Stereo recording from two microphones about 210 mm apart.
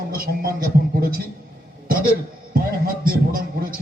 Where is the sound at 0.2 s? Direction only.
45° right (ahead or behind).